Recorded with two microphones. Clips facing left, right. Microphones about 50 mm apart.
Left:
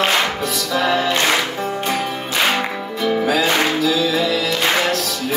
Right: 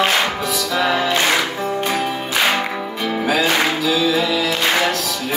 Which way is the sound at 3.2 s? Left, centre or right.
Centre.